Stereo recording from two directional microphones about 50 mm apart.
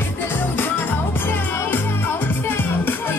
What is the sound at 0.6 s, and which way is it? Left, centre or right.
Music, left.